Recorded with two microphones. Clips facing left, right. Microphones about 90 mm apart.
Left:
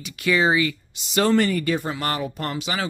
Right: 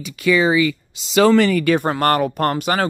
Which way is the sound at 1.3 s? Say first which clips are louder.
Right 6 dB; 90° right.